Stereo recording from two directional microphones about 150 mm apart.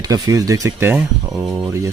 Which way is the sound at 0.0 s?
25° right (ahead or behind).